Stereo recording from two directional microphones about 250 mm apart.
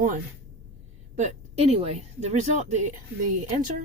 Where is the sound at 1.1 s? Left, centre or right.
Right.